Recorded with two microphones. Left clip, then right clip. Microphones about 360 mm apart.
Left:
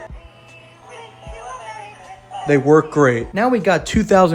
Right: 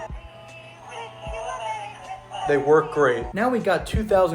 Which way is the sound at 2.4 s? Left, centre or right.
Left.